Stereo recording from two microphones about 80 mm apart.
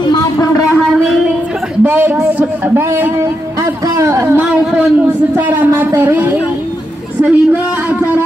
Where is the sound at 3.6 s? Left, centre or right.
Right.